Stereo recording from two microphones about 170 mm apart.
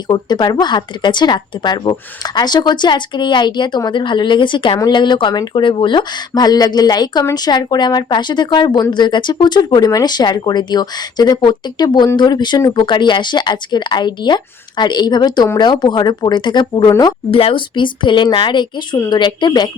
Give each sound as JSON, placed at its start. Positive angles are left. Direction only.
{"t": 0.1, "sound": "speech", "side_deg": 25}
{"t": 17.3, "sound": "speech", "side_deg": 30}